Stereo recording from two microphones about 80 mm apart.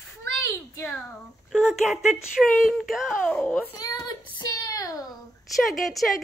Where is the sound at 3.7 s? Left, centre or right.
Left.